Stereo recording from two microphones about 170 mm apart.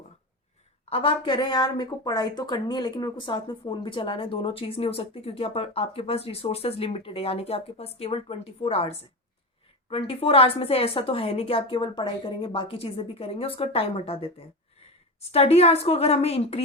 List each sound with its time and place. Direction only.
0.9 s speech: 35° left (ahead or behind)
9.9 s speech: 35° left (ahead or behind)